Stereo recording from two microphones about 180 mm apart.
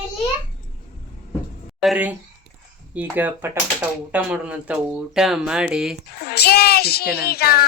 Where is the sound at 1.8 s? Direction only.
5° right (ahead or behind).